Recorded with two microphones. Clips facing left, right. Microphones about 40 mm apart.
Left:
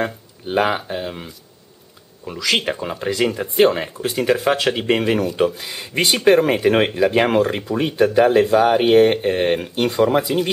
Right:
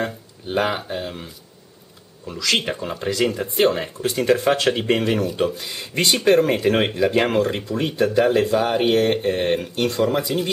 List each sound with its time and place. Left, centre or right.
0.0 s speech: centre